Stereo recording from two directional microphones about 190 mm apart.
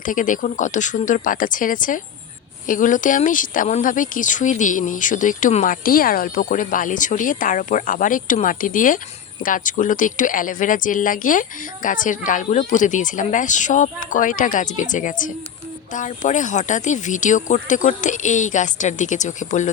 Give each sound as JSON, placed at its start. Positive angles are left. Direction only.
{"t": 0.0, "sound": "speech", "side_deg": 45}